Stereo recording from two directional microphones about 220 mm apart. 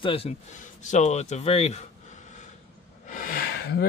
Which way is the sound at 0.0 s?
25° left (ahead or behind).